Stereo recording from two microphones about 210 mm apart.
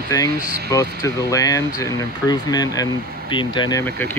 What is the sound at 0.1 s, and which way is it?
Speech, 15° left (ahead or behind).